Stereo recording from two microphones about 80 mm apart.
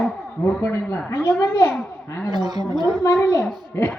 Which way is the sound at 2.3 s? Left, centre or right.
Right.